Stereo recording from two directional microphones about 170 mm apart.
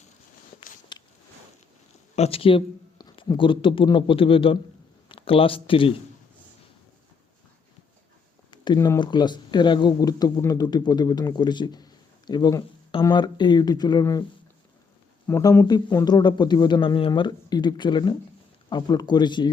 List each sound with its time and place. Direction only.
0.9 s a sound: 25° left (ahead or behind)
2.1 s speech: 35° left (ahead or behind)
8.4 s speech: 25° left (ahead or behind)
15.3 s speech: 15° left (ahead or behind)